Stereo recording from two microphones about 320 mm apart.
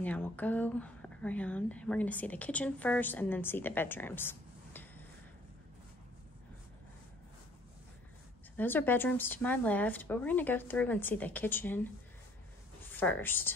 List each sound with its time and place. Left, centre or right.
0.0 s speech: centre
8.5 s speech: centre
12.9 s a woman's voice: centre